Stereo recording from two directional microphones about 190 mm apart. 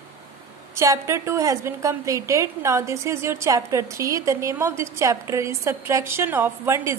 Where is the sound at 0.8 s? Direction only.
15° right (ahead or behind).